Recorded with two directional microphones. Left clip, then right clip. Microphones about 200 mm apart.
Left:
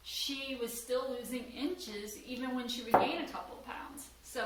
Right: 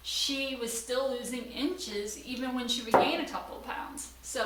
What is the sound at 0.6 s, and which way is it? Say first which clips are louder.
A woman's voice: right 1 dB; 30° right (ahead or behind).